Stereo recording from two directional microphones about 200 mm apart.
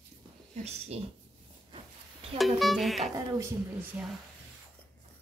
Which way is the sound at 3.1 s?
15° right (ahead or behind).